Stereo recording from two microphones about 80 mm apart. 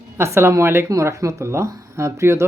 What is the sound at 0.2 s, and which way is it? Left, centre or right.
Speech, right.